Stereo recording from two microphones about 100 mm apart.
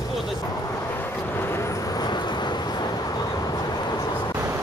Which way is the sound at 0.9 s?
20° left (ahead or behind).